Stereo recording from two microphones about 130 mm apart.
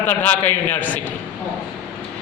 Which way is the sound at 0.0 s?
15° left (ahead or behind).